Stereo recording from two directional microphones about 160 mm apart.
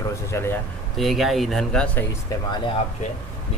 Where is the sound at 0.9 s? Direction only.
Centre (ahead or behind).